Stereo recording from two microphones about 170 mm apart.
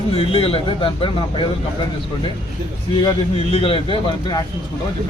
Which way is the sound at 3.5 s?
35° left (ahead or behind).